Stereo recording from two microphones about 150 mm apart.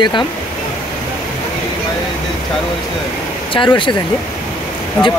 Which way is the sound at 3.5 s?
35° left (ahead or behind).